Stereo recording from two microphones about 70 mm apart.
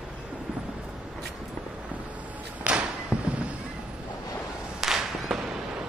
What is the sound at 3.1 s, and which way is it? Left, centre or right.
Fireworks, centre.